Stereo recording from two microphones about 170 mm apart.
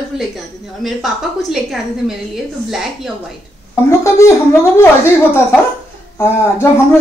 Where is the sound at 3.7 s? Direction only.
15° left (ahead or behind).